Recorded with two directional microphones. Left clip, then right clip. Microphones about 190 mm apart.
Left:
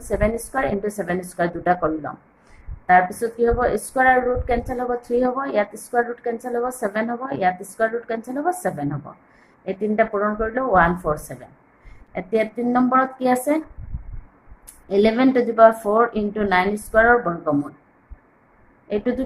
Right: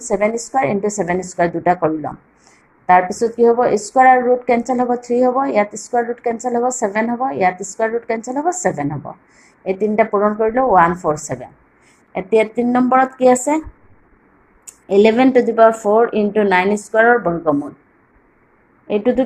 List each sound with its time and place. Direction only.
0.0 s a woman's voice: 20° right (ahead or behind)
14.8 s a woman's voice: 15° right (ahead or behind)
18.9 s a woman's voice: 15° right (ahead or behind)